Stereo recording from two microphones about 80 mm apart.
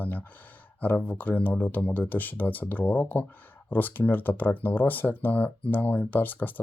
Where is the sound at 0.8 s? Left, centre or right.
Centre.